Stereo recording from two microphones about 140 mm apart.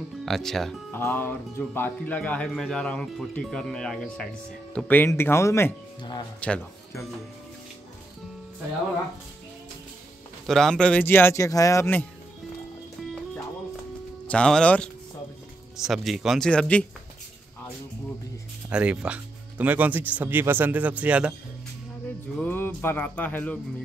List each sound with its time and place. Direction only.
0.2 s speech: centre (ahead or behind)
0.9 s speech: 15° left (ahead or behind)
10.4 s speech: 5° left (ahead or behind)
14.2 s speech: 5° left (ahead or behind)
18.7 s speech: 10° right (ahead or behind)
22.4 s speech: 15° left (ahead or behind)